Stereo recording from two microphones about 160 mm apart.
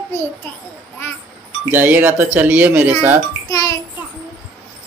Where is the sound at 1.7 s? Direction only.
10° right (ahead or behind).